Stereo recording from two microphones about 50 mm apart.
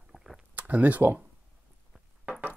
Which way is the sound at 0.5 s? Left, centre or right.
Right.